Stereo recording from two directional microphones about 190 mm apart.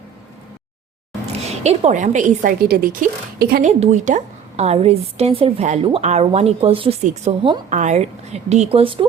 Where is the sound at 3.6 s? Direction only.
35° right (ahead or behind).